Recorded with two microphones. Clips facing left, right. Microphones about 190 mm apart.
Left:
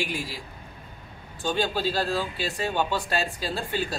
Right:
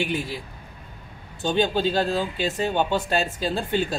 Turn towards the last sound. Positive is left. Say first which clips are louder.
# right 5 dB
turn(degrees=-20)  # may be behind; listen again after turning